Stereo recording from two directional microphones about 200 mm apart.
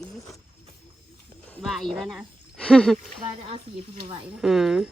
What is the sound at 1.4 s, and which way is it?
Speech, centre (ahead or behind).